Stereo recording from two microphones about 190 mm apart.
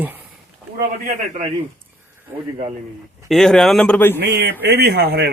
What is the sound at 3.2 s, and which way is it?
Speech, centre (ahead or behind).